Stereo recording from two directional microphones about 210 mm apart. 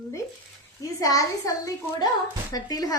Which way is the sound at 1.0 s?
15° left (ahead or behind).